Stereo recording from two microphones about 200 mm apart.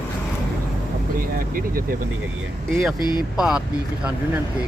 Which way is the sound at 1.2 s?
45° right (ahead or behind).